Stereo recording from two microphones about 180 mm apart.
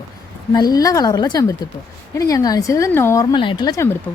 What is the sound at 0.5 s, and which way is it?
A woman's voice, 20° left (ahead or behind).